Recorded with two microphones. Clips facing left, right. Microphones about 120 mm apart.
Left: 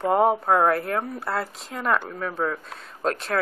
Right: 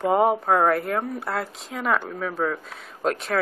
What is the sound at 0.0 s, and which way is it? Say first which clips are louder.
Speech: even; centre (ahead or behind).